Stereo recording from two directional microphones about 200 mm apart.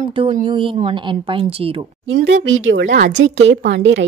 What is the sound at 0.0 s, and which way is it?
Speech, 35° right (ahead or behind).